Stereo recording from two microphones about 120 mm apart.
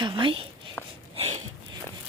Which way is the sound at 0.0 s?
45° right (ahead or behind).